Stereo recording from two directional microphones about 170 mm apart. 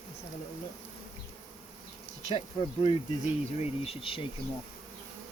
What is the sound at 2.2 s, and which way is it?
Insect, 35° left (ahead or behind).